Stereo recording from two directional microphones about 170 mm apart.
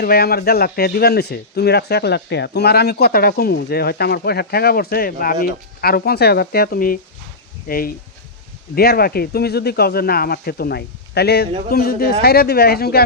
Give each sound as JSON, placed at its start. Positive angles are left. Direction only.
{"t": 0.0, "sound": "speech", "side_deg": 65}
{"t": 11.7, "sound": "speech", "side_deg": 60}